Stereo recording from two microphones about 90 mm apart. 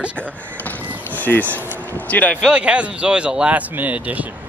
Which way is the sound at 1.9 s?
20° left (ahead or behind).